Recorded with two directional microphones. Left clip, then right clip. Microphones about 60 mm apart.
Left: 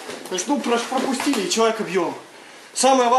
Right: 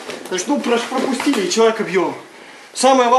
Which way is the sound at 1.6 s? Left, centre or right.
Centre.